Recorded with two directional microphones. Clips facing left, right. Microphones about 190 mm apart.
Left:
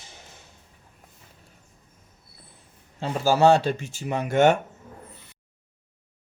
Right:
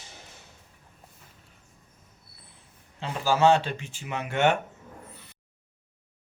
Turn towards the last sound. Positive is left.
turn(degrees=40)  # may be behind; listen again after turning